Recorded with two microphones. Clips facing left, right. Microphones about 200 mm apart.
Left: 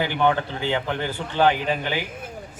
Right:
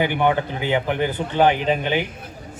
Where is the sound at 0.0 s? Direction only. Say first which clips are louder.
Right 2 dB; 15° right (ahead or behind).